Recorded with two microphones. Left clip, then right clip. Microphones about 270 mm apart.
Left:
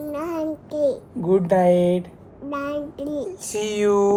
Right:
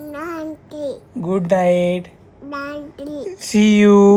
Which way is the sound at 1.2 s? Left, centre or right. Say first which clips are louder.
Right 1 dB; right.